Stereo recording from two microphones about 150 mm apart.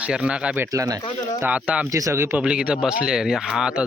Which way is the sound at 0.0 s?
5° right (ahead or behind).